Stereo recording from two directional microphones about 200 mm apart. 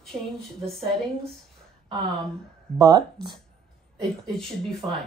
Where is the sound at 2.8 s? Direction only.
20° right (ahead or behind).